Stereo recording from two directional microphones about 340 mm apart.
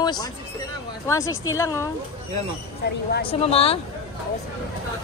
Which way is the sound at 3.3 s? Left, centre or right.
Centre.